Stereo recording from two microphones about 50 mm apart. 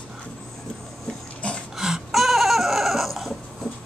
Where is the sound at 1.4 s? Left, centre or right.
Left.